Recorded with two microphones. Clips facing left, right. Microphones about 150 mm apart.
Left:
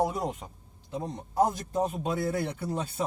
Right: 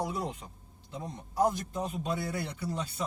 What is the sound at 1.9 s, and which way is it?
Speech, 50° left (ahead or behind).